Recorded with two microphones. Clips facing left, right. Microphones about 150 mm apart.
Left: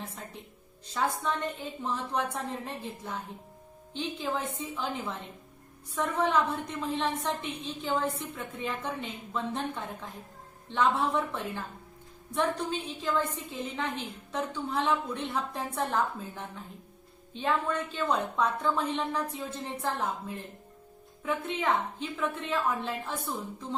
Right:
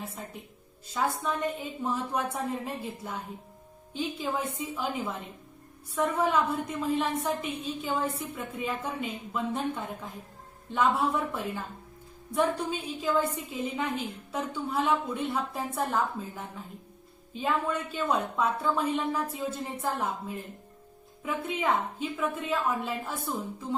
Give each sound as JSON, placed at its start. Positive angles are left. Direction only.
{"t": 0.9, "sound": "a woman's voice", "side_deg": -5}